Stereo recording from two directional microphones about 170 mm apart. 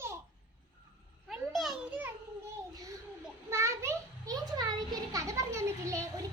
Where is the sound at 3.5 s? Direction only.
15° right (ahead or behind).